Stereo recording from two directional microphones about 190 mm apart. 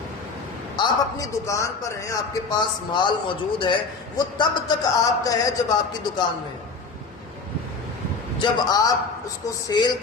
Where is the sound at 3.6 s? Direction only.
25° left (ahead or behind).